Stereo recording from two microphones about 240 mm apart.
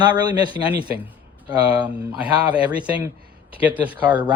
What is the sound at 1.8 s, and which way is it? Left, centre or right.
Speech, centre.